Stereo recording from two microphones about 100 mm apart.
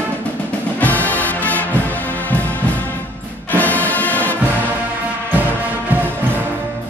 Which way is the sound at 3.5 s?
15° left (ahead or behind).